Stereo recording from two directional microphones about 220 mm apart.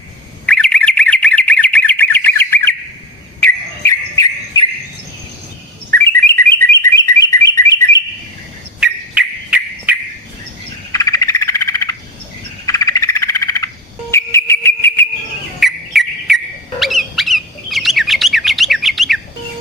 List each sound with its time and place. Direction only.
0.4 s bird: 5° left (ahead or behind)
3.4 s cricket: 15° left (ahead or behind)
5.9 s bird: 10° left (ahead or behind)
8.8 s bird: 5° right (ahead or behind)
10.9 s frog: 15° left (ahead or behind)
14.3 s a sound: 10° left (ahead or behind)
15.6 s insect: centre (ahead or behind)
16.8 s bird: centre (ahead or behind)